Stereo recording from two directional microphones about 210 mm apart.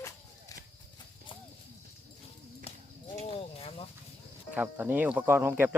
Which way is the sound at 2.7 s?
25° left (ahead or behind).